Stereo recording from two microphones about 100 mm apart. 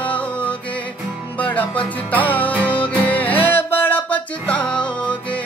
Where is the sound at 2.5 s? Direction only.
15° right (ahead or behind).